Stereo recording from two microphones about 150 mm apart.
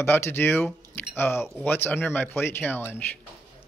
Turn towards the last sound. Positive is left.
turn(degrees=15)  # may be behind; listen again after turning